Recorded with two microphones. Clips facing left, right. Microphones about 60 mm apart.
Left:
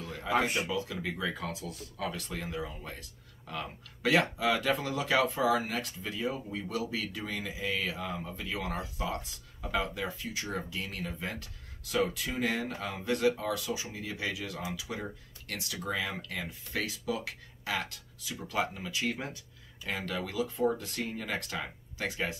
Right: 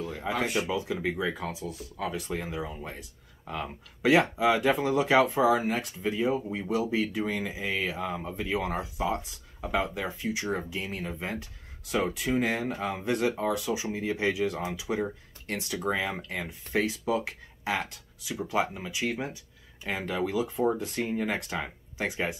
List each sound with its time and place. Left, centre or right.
0.0 s a sound: right
0.3 s speech: left
0.7 s speech: centre
19.8 s speech: right